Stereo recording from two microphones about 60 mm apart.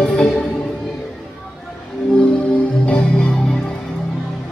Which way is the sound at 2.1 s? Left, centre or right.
Centre.